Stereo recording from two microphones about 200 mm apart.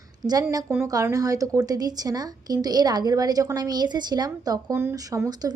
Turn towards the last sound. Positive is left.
turn(degrees=-20)  # may be behind; listen again after turning